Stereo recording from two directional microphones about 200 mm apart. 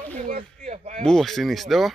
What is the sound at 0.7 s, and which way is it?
Speech, 35° right (ahead or behind).